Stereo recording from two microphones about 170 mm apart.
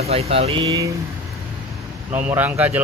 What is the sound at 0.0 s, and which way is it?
Speech, 35° right (ahead or behind).